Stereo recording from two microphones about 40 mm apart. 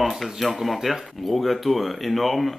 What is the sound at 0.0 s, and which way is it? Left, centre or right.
Speech, centre.